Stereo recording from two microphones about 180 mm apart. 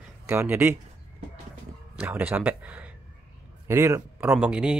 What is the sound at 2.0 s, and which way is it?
Speech, 10° right (ahead or behind).